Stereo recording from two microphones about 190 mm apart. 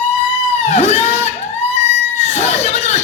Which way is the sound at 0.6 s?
35° left (ahead or behind).